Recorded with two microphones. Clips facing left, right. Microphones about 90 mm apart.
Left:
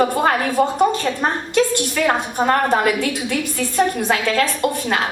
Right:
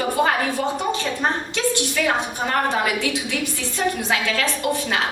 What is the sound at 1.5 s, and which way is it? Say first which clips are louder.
A woman's voice: left 4 dB; 50° left (ahead or behind).